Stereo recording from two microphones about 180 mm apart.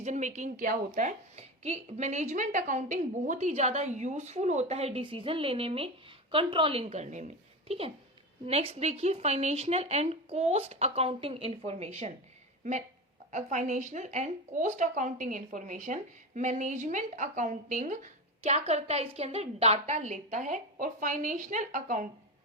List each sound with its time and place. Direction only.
0.0 s a woman's voice: 40° right (ahead or behind)
13.3 s a woman's voice: 40° right (ahead or behind)